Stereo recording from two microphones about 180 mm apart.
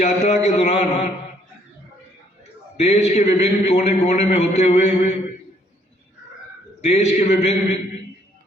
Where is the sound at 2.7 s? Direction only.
35° left (ahead or behind).